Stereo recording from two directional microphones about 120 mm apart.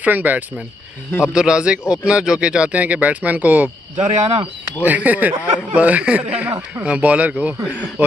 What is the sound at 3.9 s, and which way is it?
Speech, 75° right (ahead or behind).